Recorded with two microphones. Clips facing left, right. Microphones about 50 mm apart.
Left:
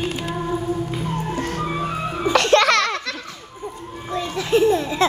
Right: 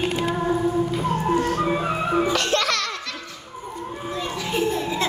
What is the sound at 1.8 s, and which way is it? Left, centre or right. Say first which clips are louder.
Music: right 2 dB; right.